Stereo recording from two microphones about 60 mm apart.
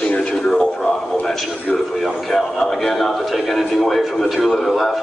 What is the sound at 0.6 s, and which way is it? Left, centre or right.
A man's voice, centre.